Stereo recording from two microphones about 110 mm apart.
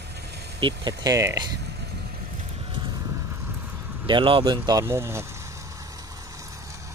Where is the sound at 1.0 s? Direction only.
30° right (ahead or behind).